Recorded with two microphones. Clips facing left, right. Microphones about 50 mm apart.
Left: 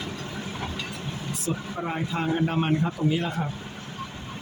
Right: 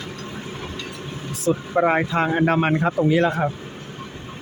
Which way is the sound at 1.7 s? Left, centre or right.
Right.